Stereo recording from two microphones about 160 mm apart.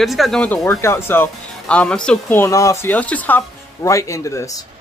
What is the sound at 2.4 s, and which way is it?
Speech, 20° left (ahead or behind).